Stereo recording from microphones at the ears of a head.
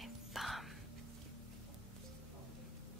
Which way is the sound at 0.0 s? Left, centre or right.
Centre.